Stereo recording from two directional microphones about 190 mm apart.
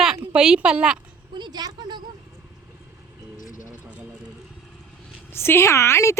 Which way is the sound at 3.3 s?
45° left (ahead or behind).